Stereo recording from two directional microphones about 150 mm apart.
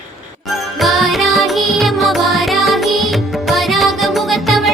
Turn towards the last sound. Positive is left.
turn(degrees=0)  # may be behind; listen again after turning